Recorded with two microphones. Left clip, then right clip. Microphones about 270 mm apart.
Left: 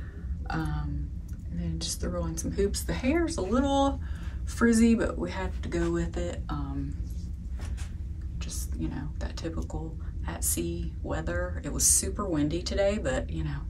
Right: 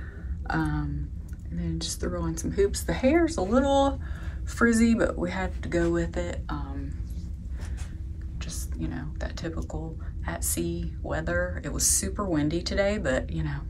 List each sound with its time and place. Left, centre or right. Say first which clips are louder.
0.5 s speech: right 5 dB; centre
8.4 s whispering: even; centre
10.2 s speech: right 2 dB; centre